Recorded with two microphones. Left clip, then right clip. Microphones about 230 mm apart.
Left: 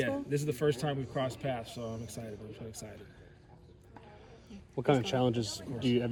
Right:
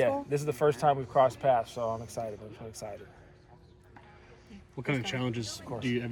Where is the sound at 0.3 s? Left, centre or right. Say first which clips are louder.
Right 4 dB; centre.